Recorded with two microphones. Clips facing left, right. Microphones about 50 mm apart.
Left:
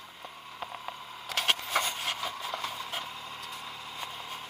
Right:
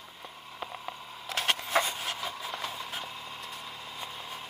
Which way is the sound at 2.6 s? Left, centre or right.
Left.